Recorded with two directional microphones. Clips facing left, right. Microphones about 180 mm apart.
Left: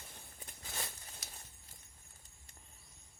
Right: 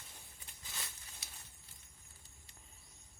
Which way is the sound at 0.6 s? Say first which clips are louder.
Left 6 dB; 55° left (ahead or behind).